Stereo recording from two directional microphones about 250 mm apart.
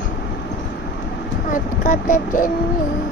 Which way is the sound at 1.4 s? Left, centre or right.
Left.